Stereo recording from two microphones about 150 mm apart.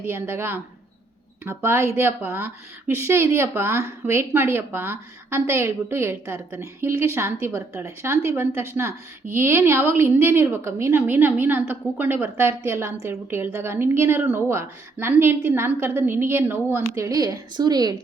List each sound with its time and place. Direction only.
0.0 s speech: 15° right (ahead or behind)